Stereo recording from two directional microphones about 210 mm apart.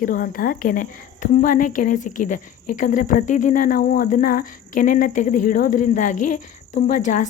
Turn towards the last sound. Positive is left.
turn(degrees=35)  # may be behind; listen again after turning